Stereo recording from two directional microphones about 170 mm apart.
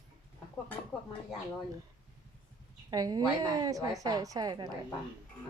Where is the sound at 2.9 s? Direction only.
20° right (ahead or behind).